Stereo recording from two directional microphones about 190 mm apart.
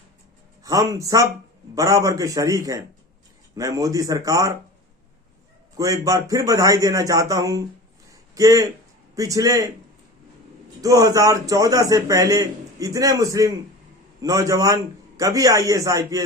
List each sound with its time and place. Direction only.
0.6 s a man's voice: 20° right (ahead or behind)
5.7 s a man's voice: 20° right (ahead or behind)
8.1 s a sound: 15° right (ahead or behind)
9.1 s a man's voice: 15° right (ahead or behind)
10.8 s a man's voice: 20° right (ahead or behind)